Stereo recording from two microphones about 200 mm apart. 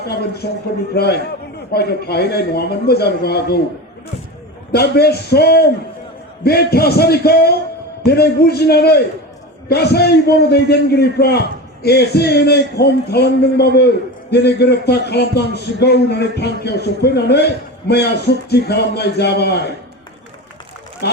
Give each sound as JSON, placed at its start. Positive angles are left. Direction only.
{"t": 0.0, "sound": "a man's voice", "side_deg": 55}
{"t": 4.7, "sound": "a man's voice", "side_deg": 55}
{"t": 21.0, "sound": "speech", "side_deg": 55}